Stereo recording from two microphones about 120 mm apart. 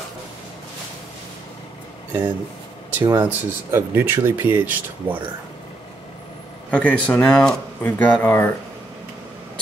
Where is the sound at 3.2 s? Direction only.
20° right (ahead or behind).